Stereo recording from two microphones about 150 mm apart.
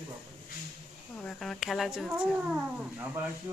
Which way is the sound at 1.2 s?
5° left (ahead or behind).